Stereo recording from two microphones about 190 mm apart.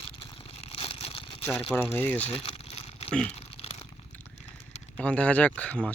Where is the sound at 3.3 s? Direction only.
30° left (ahead or behind).